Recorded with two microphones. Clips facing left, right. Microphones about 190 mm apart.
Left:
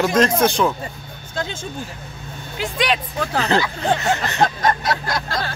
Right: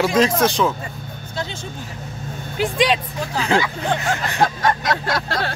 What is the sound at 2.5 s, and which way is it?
Speech, 35° right (ahead or behind).